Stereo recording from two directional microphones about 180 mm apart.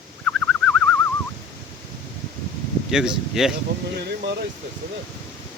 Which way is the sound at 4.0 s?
65° right (ahead or behind).